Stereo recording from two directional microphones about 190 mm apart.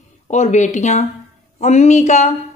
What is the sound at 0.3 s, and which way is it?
Speech, 40° left (ahead or behind).